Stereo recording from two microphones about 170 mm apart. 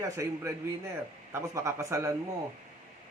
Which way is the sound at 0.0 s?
15° right (ahead or behind).